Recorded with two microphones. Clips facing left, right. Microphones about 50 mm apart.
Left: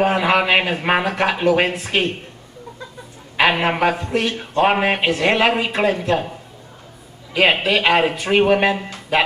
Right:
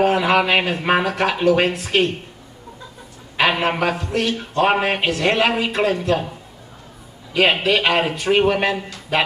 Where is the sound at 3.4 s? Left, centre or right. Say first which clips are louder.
Left 2 dB; centre.